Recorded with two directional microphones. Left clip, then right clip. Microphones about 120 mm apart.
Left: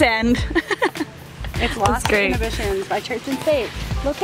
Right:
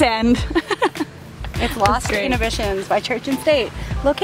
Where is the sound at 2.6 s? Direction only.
65° right (ahead or behind).